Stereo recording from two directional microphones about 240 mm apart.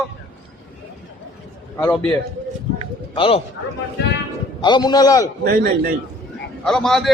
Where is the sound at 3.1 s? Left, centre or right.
Left.